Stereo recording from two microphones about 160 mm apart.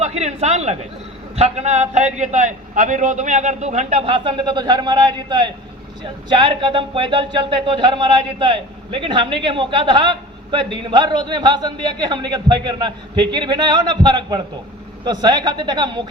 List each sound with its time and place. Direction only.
0.0 s a man's voice: 45° right (ahead or behind)